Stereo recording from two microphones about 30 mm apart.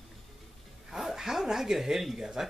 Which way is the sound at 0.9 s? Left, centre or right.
Centre.